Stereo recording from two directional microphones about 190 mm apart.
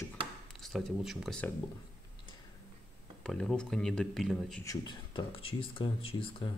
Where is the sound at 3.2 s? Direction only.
5° left (ahead or behind).